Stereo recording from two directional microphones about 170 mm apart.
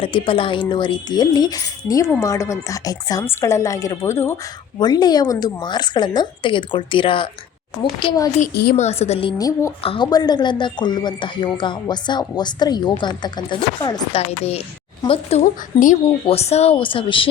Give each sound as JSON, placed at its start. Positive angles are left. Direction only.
{"t": 0.0, "sound": "speech", "side_deg": 30}
{"t": 8.7, "sound": "speech", "side_deg": 40}
{"t": 9.4, "sound": "speech", "side_deg": 20}
{"t": 9.8, "sound": "speech", "side_deg": 30}
{"t": 14.2, "sound": "speech", "side_deg": 35}